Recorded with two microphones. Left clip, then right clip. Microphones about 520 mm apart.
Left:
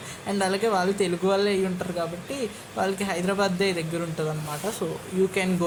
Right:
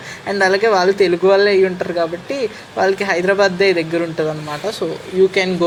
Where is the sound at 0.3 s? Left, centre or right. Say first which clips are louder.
Right 11 dB; left.